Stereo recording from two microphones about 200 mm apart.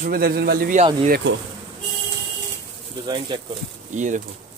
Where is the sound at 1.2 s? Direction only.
60° right (ahead or behind).